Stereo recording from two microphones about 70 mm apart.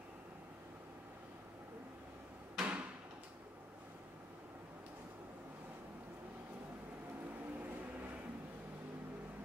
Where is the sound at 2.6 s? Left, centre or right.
Centre.